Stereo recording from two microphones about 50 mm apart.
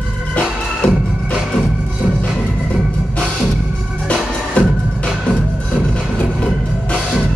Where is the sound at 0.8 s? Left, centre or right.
Left.